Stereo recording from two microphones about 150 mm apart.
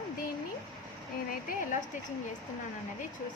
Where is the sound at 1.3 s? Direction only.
65° left (ahead or behind).